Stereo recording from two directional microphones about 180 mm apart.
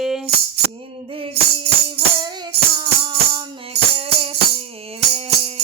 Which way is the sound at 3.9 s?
30° right (ahead or behind).